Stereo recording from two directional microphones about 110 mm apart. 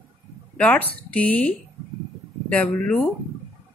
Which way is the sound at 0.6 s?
15° left (ahead or behind).